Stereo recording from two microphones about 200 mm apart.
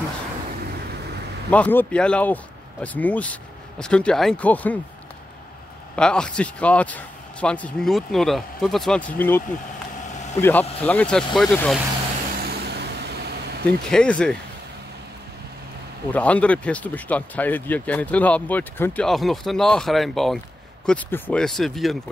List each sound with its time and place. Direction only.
1.5 s speech: 10° left (ahead or behind)
5.9 s speech: 5° left (ahead or behind)
10.4 s speech: 10° left (ahead or behind)
12.5 s vehicle: 55° right (ahead or behind)
13.7 s speech: 5° left (ahead or behind)
16.1 s speech: 5° left (ahead or behind)